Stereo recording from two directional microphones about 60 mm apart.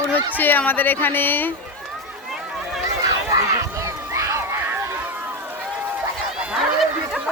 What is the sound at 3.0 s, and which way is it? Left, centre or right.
Run, right.